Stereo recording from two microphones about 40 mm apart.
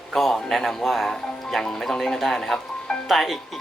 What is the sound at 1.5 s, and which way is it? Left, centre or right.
Speech, centre.